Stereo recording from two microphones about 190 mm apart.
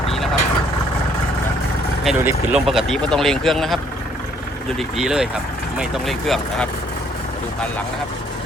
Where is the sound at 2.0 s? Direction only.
5° right (ahead or behind).